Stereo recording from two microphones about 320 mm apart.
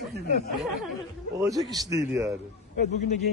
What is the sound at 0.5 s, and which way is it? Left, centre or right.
A man's voice, centre.